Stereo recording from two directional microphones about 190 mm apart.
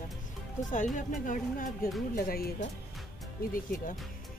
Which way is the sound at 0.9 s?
45° left (ahead or behind).